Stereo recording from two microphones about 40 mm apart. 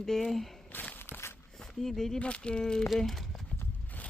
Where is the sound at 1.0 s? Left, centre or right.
Left.